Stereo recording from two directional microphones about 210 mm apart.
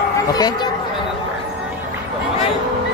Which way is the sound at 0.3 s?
20° left (ahead or behind).